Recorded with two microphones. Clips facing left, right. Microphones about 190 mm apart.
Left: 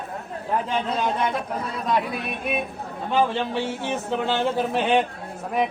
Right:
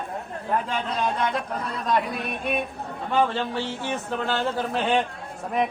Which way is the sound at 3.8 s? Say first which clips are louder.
Left 2 dB; 25° left (ahead or behind).